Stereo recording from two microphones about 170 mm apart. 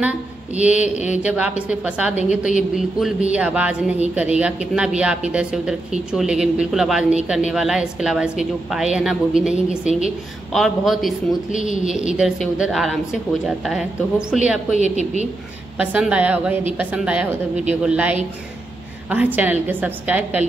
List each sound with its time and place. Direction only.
0.6 s speech: 5° right (ahead or behind)
0.8 s speech: 45° left (ahead or behind)
1.1 s a woman's voice: 10° right (ahead or behind)
14.3 s a woman's voice: 5° right (ahead or behind)
14.7 s a woman's voice: 40° right (ahead or behind)
15.8 s speech: 5° right (ahead or behind)